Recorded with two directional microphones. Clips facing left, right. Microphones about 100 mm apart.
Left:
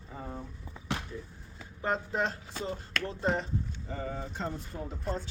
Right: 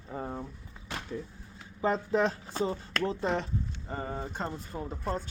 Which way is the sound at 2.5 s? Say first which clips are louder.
Right 4 dB; 40° right (ahead or behind).